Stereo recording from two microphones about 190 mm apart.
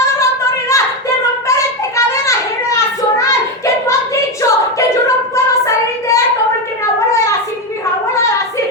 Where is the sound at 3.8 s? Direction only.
15° left (ahead or behind).